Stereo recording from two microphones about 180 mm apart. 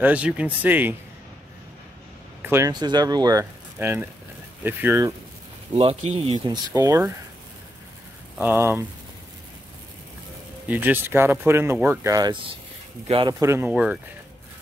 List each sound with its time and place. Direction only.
0.0 s speech: 5° right (ahead or behind)
2.4 s speech: 15° right (ahead or behind)
5.8 s speech: 35° right (ahead or behind)
6.4 s speech: 20° right (ahead or behind)
8.4 s speech: 15° right (ahead or behind)
10.7 s speech: 10° right (ahead or behind)